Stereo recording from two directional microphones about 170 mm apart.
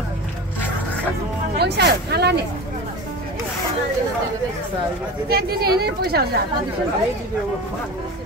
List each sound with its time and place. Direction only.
1.6 s speech: 75° right (ahead or behind)
5.3 s a woman's voice: 65° right (ahead or behind)